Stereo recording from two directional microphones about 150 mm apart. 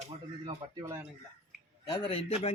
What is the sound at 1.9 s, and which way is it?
Speech, 35° left (ahead or behind).